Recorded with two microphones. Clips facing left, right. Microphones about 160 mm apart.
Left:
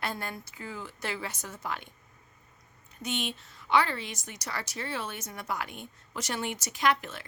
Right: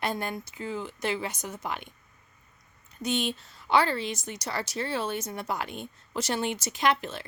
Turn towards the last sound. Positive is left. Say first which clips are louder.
# right 2 dB
turn(degrees=-30)  # may be behind; listen again after turning